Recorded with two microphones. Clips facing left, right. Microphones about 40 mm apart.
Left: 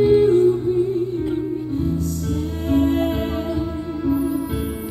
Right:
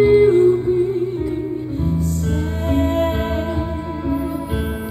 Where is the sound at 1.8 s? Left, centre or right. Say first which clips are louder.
Right 2 dB; right.